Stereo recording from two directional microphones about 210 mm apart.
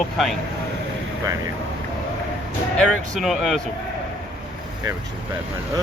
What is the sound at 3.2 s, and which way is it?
Speech, centre (ahead or behind).